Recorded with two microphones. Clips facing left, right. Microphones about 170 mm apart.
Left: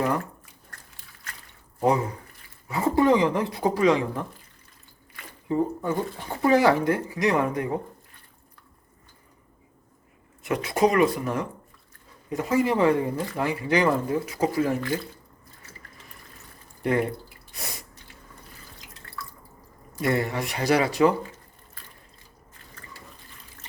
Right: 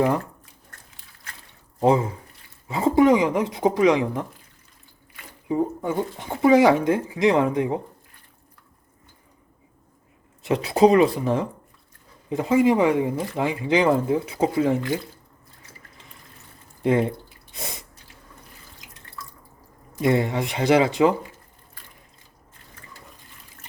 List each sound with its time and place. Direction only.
1.8 s speech: 25° right (ahead or behind)
5.5 s speech: 15° right (ahead or behind)
10.4 s speech: 30° right (ahead or behind)
16.8 s drip: 20° right (ahead or behind)
20.0 s speech: 20° right (ahead or behind)